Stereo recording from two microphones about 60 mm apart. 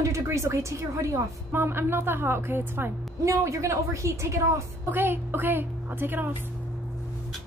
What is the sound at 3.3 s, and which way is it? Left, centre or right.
A woman's voice, right.